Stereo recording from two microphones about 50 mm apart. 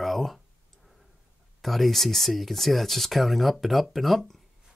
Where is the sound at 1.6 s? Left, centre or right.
Centre.